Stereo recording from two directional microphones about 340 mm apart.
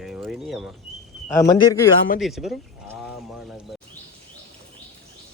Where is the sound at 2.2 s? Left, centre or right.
Centre.